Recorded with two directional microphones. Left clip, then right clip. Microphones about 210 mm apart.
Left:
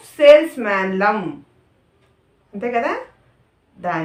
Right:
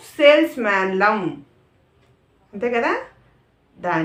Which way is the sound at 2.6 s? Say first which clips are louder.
Even; 20° right (ahead or behind).